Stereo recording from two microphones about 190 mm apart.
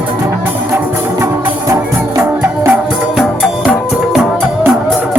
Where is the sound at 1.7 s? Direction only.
10° right (ahead or behind).